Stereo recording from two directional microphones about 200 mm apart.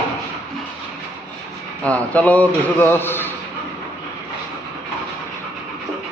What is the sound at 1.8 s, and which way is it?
A man's voice, 5° left (ahead or behind).